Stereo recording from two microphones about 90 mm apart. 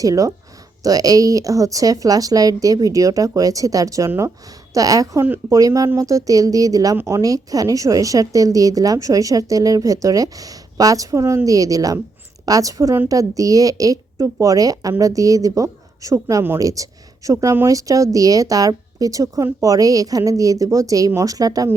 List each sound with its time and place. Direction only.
0.0 s a woman's voice: 40° right (ahead or behind)
17.7 s a woman's voice: 40° right (ahead or behind)